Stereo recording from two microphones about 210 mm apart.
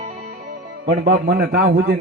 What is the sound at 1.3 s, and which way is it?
Speech, 50° right (ahead or behind).